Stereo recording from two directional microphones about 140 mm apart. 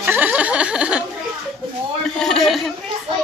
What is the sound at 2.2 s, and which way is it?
Speech, 5° left (ahead or behind).